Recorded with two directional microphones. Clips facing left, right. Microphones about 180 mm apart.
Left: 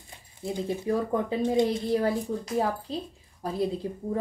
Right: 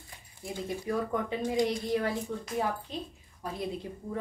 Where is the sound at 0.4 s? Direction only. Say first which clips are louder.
Left 5 dB; 20° left (ahead or behind).